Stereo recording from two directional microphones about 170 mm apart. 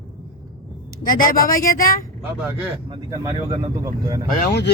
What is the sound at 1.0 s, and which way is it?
Speech, 55° left (ahead or behind).